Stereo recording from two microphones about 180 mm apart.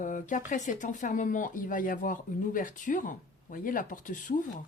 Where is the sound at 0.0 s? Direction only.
45° left (ahead or behind).